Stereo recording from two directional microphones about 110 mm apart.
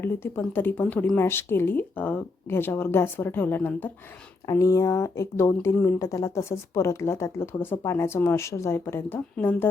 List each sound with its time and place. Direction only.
0.0 s speech: 20° left (ahead or behind)
4.4 s speech: 30° left (ahead or behind)